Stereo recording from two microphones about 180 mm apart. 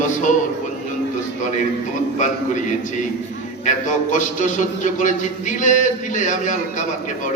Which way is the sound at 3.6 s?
45° left (ahead or behind).